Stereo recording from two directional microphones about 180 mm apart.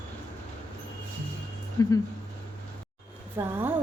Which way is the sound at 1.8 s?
20° left (ahead or behind).